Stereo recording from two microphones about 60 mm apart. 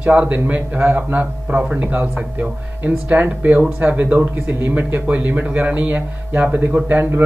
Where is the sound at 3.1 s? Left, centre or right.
Right.